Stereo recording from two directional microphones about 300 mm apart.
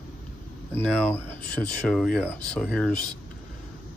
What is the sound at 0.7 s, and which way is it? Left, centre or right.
Speech, centre.